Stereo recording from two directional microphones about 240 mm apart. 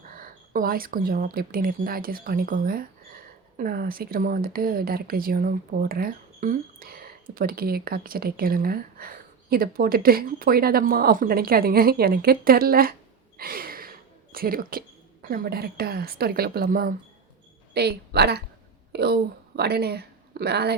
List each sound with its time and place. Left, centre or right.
0.1 s a woman's voice: right